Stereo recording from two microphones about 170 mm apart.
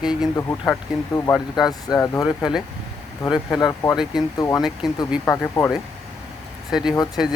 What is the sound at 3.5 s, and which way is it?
Speech, 20° left (ahead or behind).